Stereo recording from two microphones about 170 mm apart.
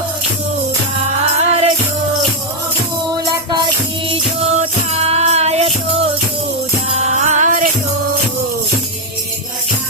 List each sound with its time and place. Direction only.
1.4 s music: 40° right (ahead or behind)
4.1 s music: 35° right (ahead or behind)
7.1 s music: 45° right (ahead or behind)